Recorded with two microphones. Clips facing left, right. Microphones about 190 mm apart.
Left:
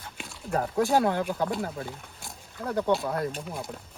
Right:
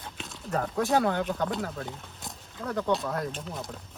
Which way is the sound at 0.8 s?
Centre (ahead or behind).